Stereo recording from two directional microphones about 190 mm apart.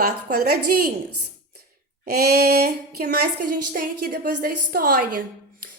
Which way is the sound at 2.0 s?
55° right (ahead or behind).